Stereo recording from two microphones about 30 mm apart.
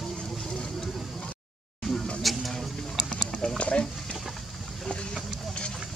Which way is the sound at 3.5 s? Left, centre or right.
Left.